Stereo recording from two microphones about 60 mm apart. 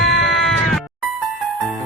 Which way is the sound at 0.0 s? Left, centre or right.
Centre.